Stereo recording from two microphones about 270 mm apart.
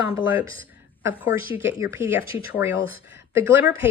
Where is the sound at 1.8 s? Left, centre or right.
Centre.